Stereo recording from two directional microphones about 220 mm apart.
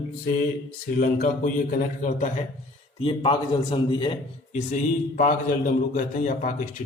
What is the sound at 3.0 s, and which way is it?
A man's voice, 25° left (ahead or behind).